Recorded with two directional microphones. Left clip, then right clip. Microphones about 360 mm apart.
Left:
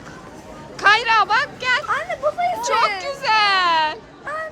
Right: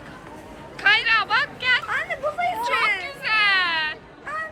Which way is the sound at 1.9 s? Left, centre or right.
Left.